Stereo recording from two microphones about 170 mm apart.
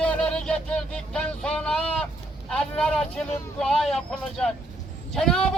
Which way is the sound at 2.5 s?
5° left (ahead or behind).